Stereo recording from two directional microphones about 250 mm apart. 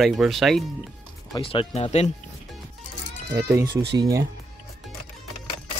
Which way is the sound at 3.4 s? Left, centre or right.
Centre.